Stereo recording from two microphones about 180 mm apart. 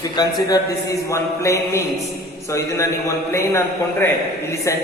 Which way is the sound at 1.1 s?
15° left (ahead or behind).